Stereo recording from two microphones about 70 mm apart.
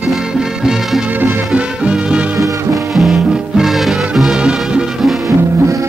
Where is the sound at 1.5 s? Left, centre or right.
Centre.